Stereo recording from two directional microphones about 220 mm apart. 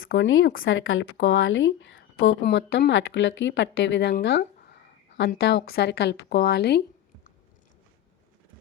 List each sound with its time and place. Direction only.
0.0 s speech: 65° left (ahead or behind)
4.1 s a sound: 45° left (ahead or behind)
5.3 s speech: 50° left (ahead or behind)